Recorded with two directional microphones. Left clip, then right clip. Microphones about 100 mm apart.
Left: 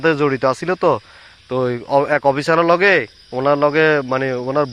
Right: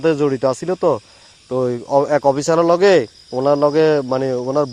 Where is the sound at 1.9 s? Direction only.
30° right (ahead or behind).